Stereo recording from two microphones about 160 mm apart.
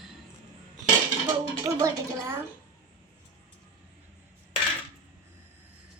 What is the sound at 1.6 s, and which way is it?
Speech, 20° right (ahead or behind).